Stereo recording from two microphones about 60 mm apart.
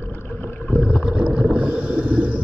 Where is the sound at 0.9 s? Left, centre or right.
Centre.